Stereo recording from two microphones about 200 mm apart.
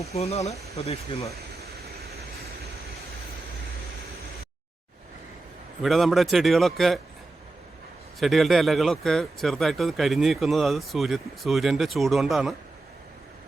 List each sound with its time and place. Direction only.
0.0 s speech: 30° left (ahead or behind)
1.3 s a sound: 50° right (ahead or behind)
5.8 s speech: centre (ahead or behind)
8.2 s speech: centre (ahead or behind)